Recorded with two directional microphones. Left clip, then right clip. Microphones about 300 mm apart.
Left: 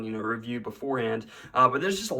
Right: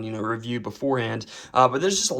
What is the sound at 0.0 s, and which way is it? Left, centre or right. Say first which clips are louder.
Speech: right 3 dB; centre.